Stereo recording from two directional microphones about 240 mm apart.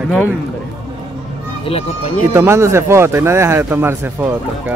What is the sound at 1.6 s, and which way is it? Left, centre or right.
Speech, left.